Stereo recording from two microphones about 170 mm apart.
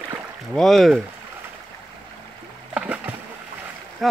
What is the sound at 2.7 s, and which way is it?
Splash, 5° right (ahead or behind).